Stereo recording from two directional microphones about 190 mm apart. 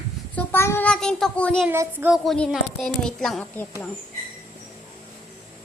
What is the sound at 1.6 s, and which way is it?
Speech, 15° right (ahead or behind).